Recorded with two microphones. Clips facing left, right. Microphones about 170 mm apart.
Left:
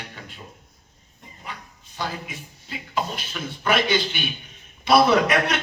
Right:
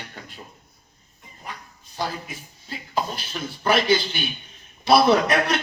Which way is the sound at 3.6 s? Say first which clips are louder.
Right 2 dB; 35° right (ahead or behind).